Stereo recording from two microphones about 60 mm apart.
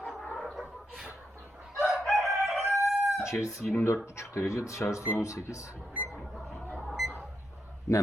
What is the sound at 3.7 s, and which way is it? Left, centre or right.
Speech, left.